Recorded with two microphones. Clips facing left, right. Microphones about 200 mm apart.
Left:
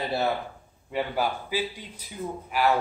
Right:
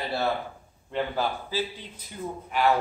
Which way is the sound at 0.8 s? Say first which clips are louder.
Left 1 dB; 10° left (ahead or behind).